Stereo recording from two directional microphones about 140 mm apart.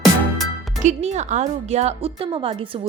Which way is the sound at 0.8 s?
55° right (ahead or behind).